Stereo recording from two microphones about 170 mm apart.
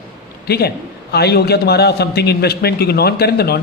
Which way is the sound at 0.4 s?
65° left (ahead or behind).